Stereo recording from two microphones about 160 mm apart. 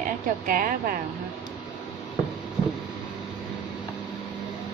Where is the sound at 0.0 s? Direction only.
60° right (ahead or behind).